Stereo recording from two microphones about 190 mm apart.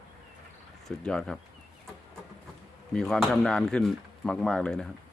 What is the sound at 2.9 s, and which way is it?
Speech, 5° left (ahead or behind).